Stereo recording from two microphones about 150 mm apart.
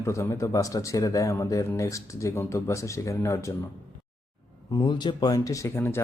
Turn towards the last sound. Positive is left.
turn(degrees=15)  # may be behind; listen again after turning